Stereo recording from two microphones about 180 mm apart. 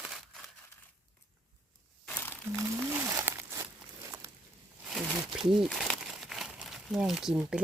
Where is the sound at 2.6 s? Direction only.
15° right (ahead or behind).